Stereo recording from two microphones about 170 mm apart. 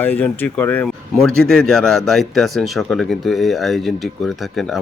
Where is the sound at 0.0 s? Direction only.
10° left (ahead or behind).